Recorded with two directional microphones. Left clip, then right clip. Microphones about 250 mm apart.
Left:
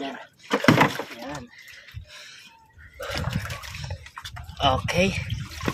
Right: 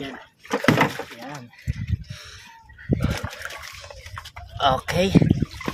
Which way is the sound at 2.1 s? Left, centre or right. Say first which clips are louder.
Right 2 dB; right.